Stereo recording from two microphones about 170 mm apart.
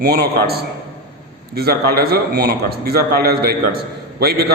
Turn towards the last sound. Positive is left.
turn(degrees=-65)  # may be behind; listen again after turning